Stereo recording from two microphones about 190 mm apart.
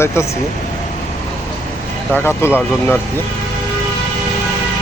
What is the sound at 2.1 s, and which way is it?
Speech, 15° left (ahead or behind).